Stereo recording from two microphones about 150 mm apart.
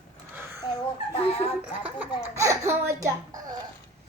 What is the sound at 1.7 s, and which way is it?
A child's voice, 10° right (ahead or behind).